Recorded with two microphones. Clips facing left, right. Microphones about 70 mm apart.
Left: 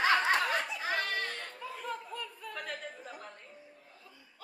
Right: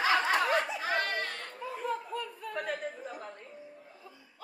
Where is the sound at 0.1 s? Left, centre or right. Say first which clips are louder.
Right 1 dB; centre.